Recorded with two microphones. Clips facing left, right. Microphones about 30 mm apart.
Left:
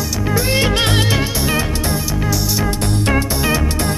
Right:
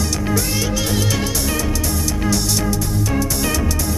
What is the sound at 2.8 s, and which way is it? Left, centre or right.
Music, left.